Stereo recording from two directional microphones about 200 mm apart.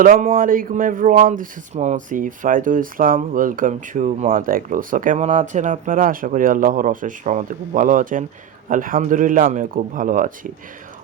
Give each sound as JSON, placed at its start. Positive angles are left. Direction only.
{"t": 0.0, "sound": "speech", "side_deg": -45}